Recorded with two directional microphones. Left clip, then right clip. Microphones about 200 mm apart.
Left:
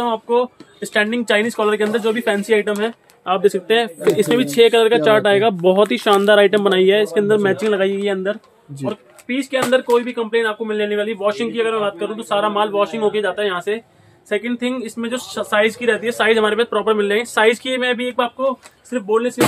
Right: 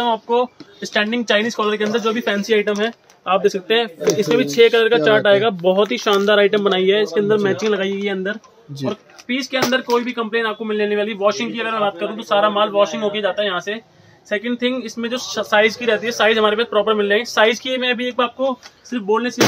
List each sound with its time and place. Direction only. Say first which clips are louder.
0.0 s speech: even; 15° left (ahead or behind)
3.3 s speech: left 1 dB; 30° left (ahead or behind)
9.3 s speech: left 2 dB; 5° left (ahead or behind)